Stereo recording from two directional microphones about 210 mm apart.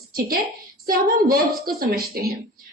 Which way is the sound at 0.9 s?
45° right (ahead or behind).